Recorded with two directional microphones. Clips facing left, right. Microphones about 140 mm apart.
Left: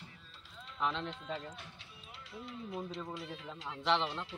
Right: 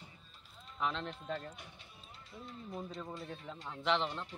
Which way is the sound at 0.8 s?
Centre (ahead or behind).